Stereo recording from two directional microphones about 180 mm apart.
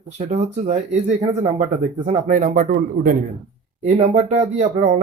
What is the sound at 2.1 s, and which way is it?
Speech, 45° right (ahead or behind).